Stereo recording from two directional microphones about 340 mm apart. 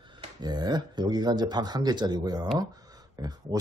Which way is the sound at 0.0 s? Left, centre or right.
Centre.